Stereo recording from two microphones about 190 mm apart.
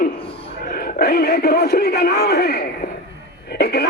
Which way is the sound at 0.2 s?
30° left (ahead or behind).